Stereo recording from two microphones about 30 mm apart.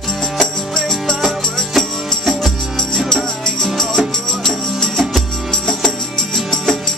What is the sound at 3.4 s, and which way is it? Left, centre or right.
Music, centre.